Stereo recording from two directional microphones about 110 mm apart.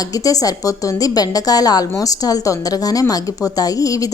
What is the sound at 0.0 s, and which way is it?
A woman's voice, 35° left (ahead or behind).